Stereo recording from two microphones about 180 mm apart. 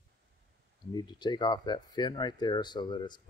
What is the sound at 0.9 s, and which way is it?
Speech, 25° left (ahead or behind).